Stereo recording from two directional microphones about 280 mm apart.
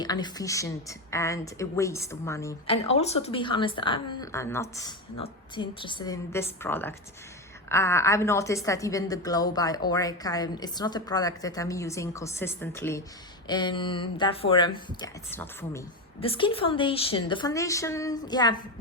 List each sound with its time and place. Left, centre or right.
0.0 s a woman's voice: centre
2.9 s a woman's voice: left
16.2 s a woman's voice: centre